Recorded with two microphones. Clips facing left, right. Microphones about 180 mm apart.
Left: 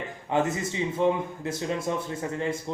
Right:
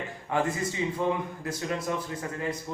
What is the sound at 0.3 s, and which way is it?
Speech, 25° left (ahead or behind).